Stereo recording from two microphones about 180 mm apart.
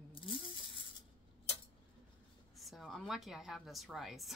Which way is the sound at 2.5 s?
Centre (ahead or behind).